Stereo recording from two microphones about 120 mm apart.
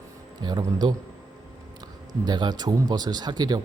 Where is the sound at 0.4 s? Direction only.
40° right (ahead or behind).